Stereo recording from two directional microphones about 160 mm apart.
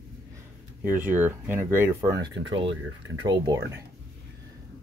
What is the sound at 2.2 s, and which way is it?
Speech, 25° right (ahead or behind).